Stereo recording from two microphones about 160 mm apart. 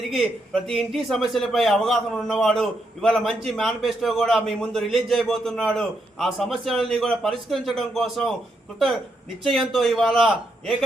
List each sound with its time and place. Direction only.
0.1 s a man's voice: centre (ahead or behind)
9.4 s a man's voice: centre (ahead or behind)